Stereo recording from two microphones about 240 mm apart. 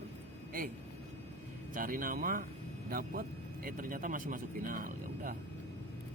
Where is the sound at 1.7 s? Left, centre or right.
Right.